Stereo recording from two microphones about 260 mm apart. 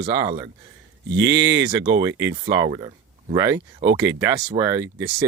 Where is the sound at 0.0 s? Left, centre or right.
Centre.